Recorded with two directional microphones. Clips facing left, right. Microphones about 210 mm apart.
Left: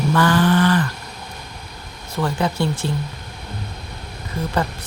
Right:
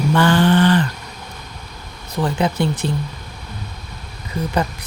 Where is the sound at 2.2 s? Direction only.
20° right (ahead or behind).